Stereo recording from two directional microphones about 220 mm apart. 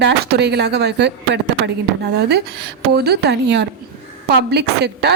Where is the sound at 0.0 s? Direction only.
50° right (ahead or behind).